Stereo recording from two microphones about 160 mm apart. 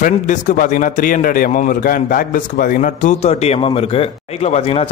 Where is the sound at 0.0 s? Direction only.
50° left (ahead or behind).